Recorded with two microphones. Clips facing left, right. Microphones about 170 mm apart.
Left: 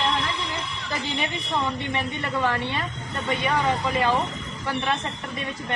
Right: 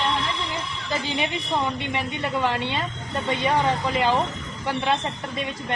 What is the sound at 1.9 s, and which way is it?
Speech, 15° right (ahead or behind).